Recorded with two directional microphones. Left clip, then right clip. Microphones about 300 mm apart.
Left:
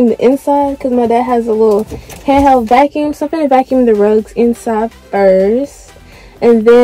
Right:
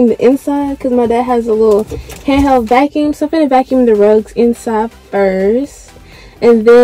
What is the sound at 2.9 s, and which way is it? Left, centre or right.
Speech, centre.